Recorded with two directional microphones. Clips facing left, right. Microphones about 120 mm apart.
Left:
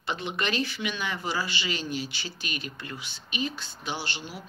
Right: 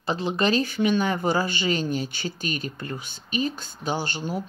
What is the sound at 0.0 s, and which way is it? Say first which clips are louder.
Speech: right 7 dB; 35° right (ahead or behind).